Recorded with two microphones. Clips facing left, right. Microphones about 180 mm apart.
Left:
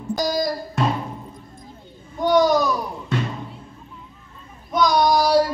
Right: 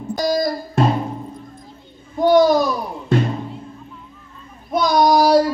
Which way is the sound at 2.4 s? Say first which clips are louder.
Right 3 dB; 50° right (ahead or behind).